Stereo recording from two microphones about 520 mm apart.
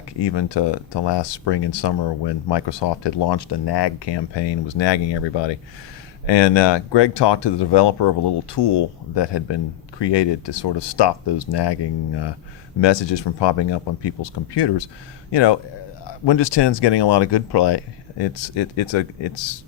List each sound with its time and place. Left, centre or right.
0.2 s speech: left